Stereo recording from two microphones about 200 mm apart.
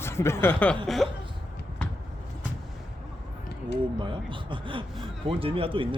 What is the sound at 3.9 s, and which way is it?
A man's voice, 25° right (ahead or behind).